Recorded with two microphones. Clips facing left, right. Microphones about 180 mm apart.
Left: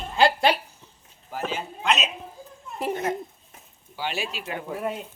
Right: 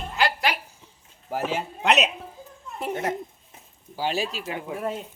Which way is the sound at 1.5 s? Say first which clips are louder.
Right 2 dB; 70° right (ahead or behind).